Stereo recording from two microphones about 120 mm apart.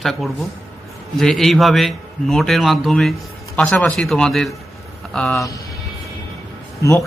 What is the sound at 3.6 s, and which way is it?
Speech, 10° left (ahead or behind).